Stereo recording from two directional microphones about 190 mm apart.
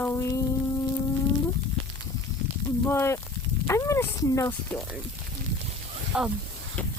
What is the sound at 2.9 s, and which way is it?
Speech, 15° left (ahead or behind).